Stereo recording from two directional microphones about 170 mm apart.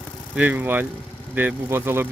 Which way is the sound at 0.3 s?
10° right (ahead or behind).